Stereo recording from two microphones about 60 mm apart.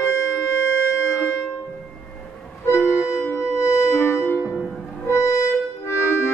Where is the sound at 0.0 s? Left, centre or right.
Left.